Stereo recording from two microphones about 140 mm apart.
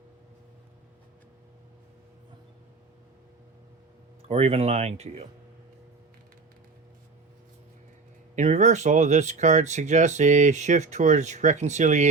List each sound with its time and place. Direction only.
4.3 s speech: 45° right (ahead or behind)
8.4 s speech: 55° right (ahead or behind)